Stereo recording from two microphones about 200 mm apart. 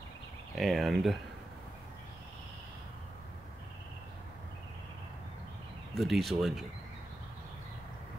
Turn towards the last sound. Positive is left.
turn(degrees=0)  # may be behind; listen again after turning